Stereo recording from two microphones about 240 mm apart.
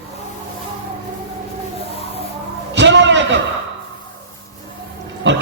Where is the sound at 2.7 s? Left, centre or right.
Right.